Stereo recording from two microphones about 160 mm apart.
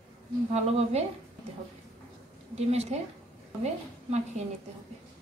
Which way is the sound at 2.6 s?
40° right (ahead or behind).